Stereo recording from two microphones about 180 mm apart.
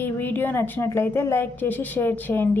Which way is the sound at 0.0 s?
10° left (ahead or behind).